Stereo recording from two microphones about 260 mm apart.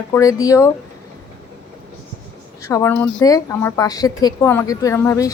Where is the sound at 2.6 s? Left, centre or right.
Centre.